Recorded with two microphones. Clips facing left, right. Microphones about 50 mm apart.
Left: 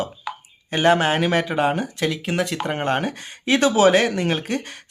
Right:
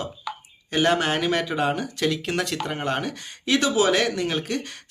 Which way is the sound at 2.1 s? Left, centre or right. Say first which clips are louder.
Left 1 dB; centre.